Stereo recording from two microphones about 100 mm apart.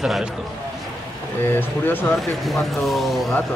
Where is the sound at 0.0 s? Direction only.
5° right (ahead or behind).